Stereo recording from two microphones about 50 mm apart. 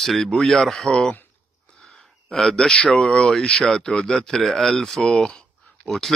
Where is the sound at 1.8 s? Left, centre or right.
Centre.